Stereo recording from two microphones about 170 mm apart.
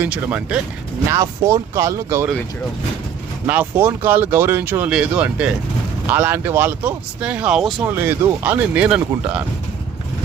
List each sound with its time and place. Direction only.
0.0 s speech: 10° right (ahead or behind)
1.1 s speech: 20° right (ahead or behind)
3.4 s speech: 10° right (ahead or behind)
7.9 s speech: 15° right (ahead or behind)